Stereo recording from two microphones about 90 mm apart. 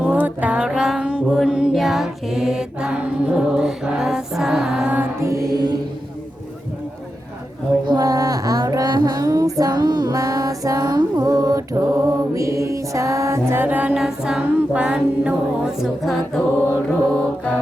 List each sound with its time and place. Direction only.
0.0 s music: 15° right (ahead or behind)
5.2 s mantra: 35° right (ahead or behind)
7.9 s child singing: 45° right (ahead or behind)
8.7 s music: 50° right (ahead or behind); by 13.7 s 30° right (ahead or behind)
13.7 s music: 15° right (ahead or behind)
15.6 s music: centre (ahead or behind)
16.6 s mantra: 15° left (ahead or behind)